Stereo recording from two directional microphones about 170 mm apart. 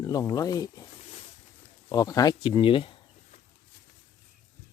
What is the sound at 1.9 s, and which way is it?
Speech, 20° left (ahead or behind).